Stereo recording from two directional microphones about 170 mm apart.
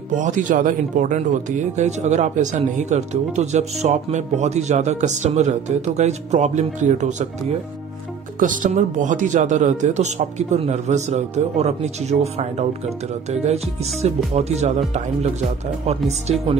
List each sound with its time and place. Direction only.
0.1 s speech: 50° right (ahead or behind)
8.4 s speech: 50° right (ahead or behind)